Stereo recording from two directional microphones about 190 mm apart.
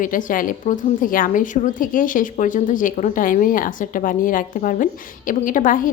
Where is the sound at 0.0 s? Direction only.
45° left (ahead or behind).